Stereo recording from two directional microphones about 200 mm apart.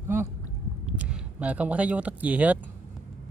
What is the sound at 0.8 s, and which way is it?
Speech, 5° right (ahead or behind).